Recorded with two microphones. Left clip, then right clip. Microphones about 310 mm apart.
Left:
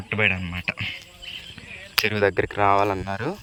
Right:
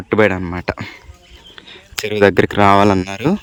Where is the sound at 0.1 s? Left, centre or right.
Centre.